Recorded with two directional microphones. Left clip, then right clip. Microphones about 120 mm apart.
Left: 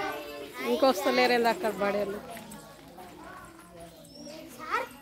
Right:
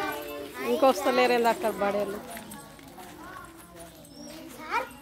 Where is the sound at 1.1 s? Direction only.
Centre (ahead or behind).